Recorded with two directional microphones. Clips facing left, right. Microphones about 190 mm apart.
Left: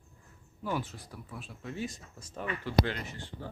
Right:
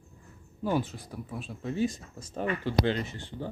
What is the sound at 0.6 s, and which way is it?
Speech, 25° right (ahead or behind).